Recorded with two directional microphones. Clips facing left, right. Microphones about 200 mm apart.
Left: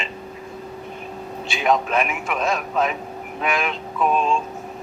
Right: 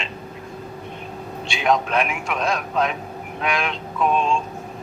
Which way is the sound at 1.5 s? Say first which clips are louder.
Even; centre (ahead or behind).